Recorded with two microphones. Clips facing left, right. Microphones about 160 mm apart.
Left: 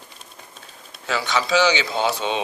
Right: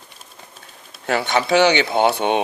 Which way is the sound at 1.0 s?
55° right (ahead or behind).